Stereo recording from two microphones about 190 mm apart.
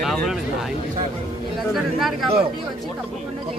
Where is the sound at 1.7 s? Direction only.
Centre (ahead or behind).